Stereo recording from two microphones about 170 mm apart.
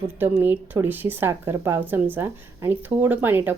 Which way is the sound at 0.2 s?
10° right (ahead or behind).